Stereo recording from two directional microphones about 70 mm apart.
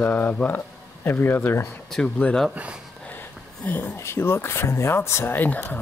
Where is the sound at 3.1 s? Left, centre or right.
Left.